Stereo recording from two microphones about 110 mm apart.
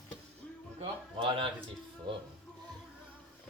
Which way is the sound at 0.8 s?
60° right (ahead or behind).